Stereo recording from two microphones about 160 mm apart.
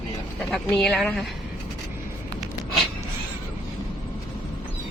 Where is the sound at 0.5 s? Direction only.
Centre (ahead or behind).